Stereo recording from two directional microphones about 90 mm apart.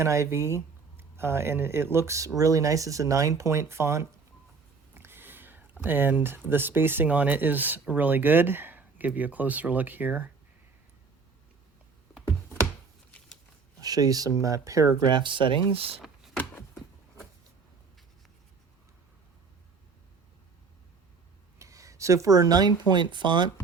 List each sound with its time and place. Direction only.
0.0 s speech: 35° right (ahead or behind)
4.9 s a sound: 25° right (ahead or behind)
5.8 s speech: 20° right (ahead or behind)
13.1 s scissors: 10° left (ahead or behind)
13.8 s speech: 45° right (ahead or behind)
15.1 s speech: 65° right (ahead or behind); by 16.0 s 90° right
21.6 s a sound: 35° right (ahead or behind)
22.9 s speech: 60° right (ahead or behind)